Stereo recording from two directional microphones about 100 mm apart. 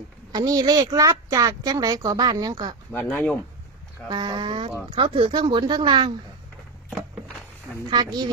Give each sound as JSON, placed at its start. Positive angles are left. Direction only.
{"t": 0.3, "sound": "speech", "side_deg": -40}
{"t": 2.9, "sound": "speech", "side_deg": 20}
{"t": 4.1, "sound": "a woman's voice", "side_deg": -50}
{"t": 5.3, "sound": "a woman's voice", "side_deg": -50}
{"t": 7.9, "sound": "a woman's voice", "side_deg": -45}